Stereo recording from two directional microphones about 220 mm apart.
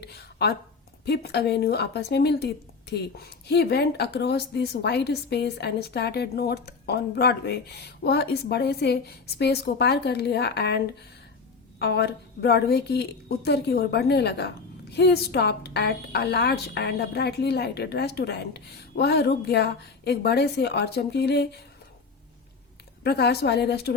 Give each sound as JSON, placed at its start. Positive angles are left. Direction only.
{"t": 0.0, "sound": "a sound", "side_deg": 45}
{"t": 1.0, "sound": "speech", "side_deg": 50}
{"t": 23.0, "sound": "speech", "side_deg": 50}